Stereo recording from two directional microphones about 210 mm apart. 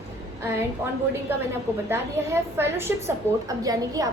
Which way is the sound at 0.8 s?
10° right (ahead or behind).